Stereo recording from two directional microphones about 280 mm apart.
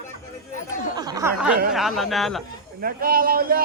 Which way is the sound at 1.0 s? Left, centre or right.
Centre.